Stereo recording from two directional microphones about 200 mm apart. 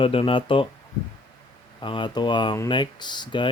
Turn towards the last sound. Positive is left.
turn(degrees=25)  # may be behind; listen again after turning